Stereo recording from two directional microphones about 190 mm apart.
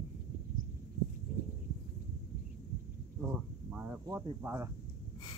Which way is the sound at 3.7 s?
10° right (ahead or behind).